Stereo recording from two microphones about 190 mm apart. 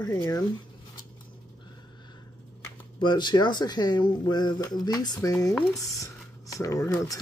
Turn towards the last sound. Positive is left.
turn(degrees=15)  # may be behind; listen again after turning